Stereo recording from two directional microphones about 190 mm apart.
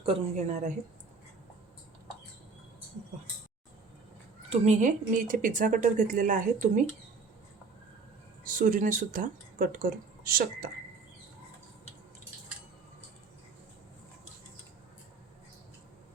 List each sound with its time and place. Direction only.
0.0 s speech: 35° right (ahead or behind)
4.4 s a woman's voice: 35° right (ahead or behind)
8.4 s a woman's voice: 45° right (ahead or behind)